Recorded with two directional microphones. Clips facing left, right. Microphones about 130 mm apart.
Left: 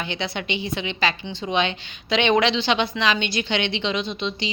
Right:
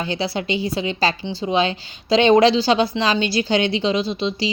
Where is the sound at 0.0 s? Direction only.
35° right (ahead or behind).